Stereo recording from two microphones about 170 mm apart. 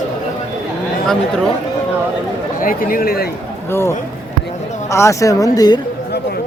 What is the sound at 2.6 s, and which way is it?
Speech, 55° left (ahead or behind).